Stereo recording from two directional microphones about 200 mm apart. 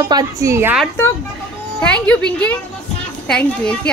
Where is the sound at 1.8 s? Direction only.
5° left (ahead or behind).